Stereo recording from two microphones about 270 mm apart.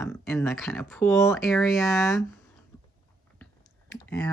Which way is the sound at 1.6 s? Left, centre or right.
Centre.